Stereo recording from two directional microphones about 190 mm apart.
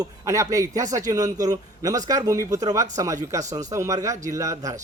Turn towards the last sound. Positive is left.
turn(degrees=-15)  # may be behind; listen again after turning